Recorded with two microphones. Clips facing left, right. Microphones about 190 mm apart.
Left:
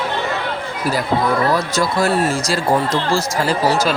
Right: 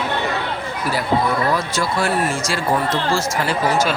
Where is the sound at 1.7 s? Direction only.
40° left (ahead or behind).